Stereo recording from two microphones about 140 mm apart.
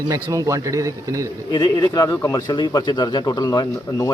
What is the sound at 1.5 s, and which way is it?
Speech, 30° left (ahead or behind).